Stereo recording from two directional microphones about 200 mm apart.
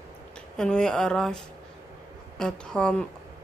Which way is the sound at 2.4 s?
5° left (ahead or behind).